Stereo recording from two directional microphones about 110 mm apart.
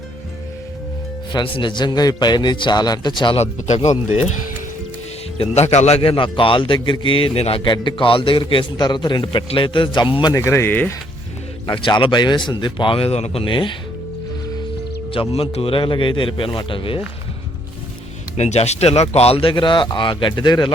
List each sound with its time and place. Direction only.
1.3 s a man's voice: 45° left (ahead or behind)
3.3 s speech: 80° left
5.4 s a man's voice: 80° left; by 7.6 s 60° left (ahead or behind)
7.6 s a man's voice: 45° left (ahead or behind)
10.3 s speech: 25° left (ahead or behind)
11.7 s a man's voice: 50° left (ahead or behind); by 13.4 s 70° left (ahead or behind)
13.4 s a man's voice: 50° left (ahead or behind)
15.1 s a man's voice: 55° left (ahead or behind)
18.3 s a man's voice: 80° left; by 20.7 s 40° left (ahead or behind)